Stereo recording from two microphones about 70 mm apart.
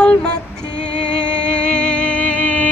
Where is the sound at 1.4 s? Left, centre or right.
Centre.